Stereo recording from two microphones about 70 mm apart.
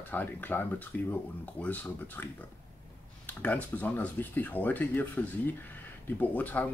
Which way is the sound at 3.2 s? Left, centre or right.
Left.